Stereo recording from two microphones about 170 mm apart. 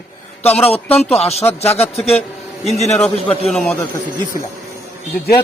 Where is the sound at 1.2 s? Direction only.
35° left (ahead or behind).